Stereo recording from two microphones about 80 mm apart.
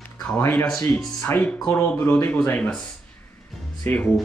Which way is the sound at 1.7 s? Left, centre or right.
Left.